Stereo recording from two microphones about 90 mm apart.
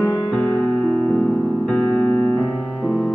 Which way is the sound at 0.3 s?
20° left (ahead or behind).